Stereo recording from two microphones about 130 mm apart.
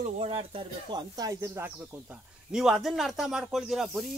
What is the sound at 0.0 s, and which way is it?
Speech, 50° right (ahead or behind).